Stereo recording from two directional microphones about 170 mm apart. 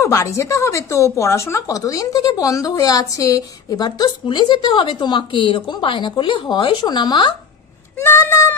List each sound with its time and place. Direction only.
0.0 s a woman's voice: 20° left (ahead or behind)
8.0 s speech: 15° left (ahead or behind)